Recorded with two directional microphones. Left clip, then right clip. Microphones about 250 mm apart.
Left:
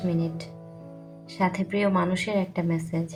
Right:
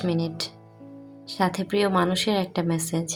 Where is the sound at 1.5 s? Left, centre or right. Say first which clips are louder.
Right 1 dB; right.